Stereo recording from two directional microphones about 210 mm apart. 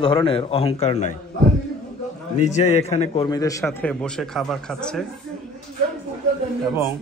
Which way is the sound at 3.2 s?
15° left (ahead or behind).